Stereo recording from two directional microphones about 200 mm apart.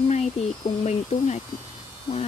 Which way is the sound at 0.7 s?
35° left (ahead or behind).